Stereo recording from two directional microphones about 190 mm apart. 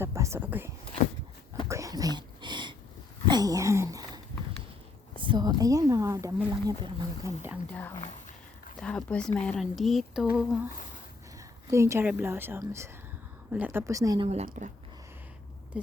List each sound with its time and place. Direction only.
0.0 s speech: 15° right (ahead or behind)
1.6 s a sound: 15° right (ahead or behind)
5.2 s speech: 25° right (ahead or behind)
7.7 s speech: 10° left (ahead or behind)
11.3 s speech: 15° right (ahead or behind)
14.3 s a woman's voice: 40° right (ahead or behind)
15.7 s speech: 5° right (ahead or behind)